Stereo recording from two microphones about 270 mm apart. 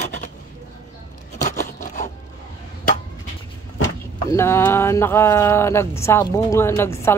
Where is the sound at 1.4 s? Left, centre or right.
Left.